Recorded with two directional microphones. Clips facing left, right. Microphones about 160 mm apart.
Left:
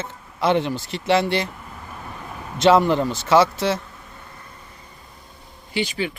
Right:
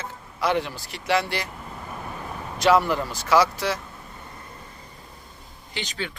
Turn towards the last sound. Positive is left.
turn(degrees=10)  # may be behind; listen again after turning